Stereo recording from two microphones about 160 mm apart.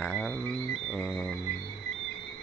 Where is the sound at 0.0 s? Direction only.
10° left (ahead or behind).